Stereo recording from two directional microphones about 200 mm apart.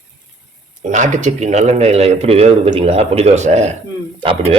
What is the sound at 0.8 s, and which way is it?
Speech, 40° right (ahead or behind).